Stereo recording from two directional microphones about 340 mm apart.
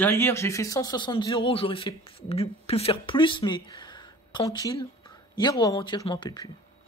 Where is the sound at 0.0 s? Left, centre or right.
Centre.